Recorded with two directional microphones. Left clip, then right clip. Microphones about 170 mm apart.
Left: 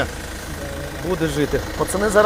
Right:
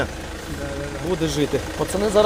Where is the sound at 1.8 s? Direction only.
35° left (ahead or behind).